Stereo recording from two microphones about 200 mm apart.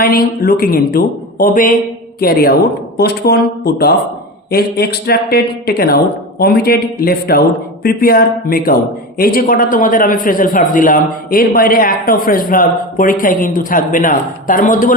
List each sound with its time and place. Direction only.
0.0 s speech: 45° left (ahead or behind)